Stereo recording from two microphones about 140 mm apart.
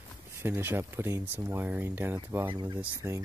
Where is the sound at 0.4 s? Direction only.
15° right (ahead or behind).